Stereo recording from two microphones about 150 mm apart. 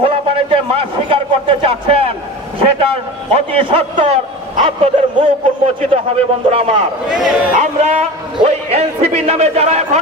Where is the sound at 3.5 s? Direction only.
40° right (ahead or behind).